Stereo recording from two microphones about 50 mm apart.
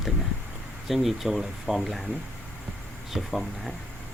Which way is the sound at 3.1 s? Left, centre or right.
Centre.